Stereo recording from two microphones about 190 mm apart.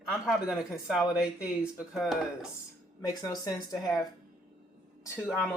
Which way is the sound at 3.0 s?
20° left (ahead or behind).